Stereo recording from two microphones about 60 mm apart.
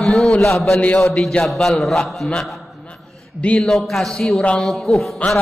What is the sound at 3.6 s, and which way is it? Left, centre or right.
A man's voice, centre.